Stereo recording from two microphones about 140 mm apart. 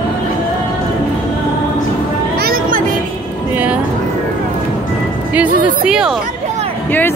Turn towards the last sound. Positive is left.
turn(degrees=15)  # may be behind; listen again after turning